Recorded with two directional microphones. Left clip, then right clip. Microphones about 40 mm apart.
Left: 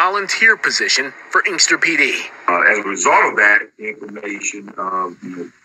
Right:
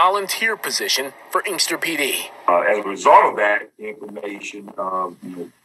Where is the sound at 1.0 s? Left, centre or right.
Centre.